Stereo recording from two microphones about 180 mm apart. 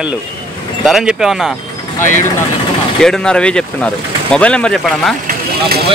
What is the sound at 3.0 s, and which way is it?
Speech, 5° left (ahead or behind).